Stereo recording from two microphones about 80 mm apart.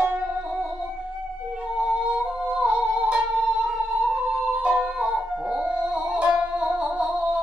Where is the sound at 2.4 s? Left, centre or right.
Centre.